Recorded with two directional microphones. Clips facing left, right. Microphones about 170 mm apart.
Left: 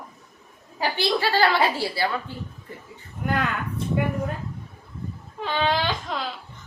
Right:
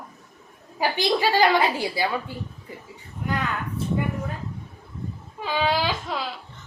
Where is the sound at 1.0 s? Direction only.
15° right (ahead or behind).